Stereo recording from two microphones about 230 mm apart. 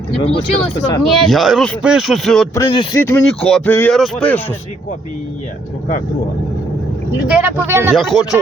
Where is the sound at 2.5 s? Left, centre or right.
Centre.